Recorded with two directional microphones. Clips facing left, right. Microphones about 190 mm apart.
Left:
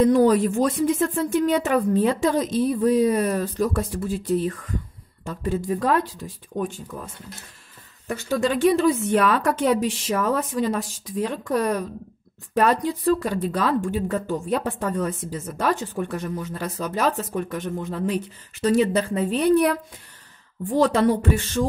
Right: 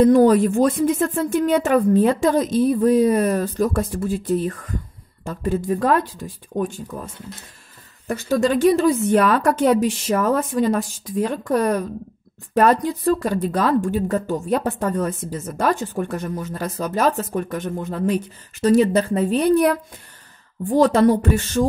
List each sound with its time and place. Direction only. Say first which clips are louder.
0.0 s speech: right 4 dB; 50° right (ahead or behind)
8.1 s speech: right 4 dB; 40° right (ahead or behind)